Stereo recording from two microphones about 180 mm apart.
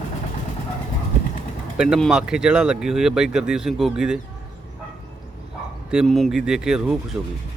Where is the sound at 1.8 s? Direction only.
Centre (ahead or behind).